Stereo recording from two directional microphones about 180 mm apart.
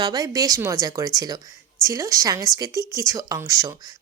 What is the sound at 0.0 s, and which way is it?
Speech, 20° right (ahead or behind).